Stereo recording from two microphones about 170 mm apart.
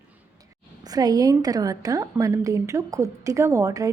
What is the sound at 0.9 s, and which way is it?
A woman's voice, 20° right (ahead or behind).